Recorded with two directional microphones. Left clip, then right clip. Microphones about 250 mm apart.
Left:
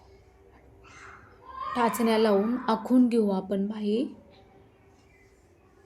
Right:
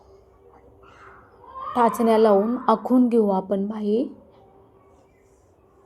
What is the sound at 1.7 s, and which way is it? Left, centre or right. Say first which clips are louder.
A woman's voice: right 7 dB; centre.